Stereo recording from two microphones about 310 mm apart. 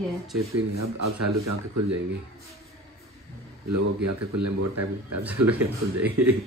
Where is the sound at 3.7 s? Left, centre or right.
Right.